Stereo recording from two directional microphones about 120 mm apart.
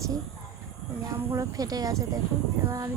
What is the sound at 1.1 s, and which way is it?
Speech, 25° right (ahead or behind).